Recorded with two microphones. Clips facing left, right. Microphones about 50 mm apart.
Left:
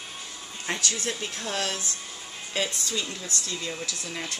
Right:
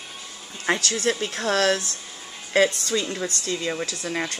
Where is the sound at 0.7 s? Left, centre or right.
Right.